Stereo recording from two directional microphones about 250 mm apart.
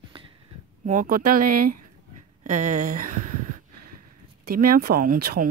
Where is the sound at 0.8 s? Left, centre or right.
Right.